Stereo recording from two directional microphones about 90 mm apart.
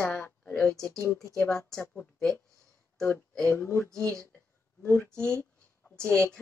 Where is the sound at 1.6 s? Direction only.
30° left (ahead or behind).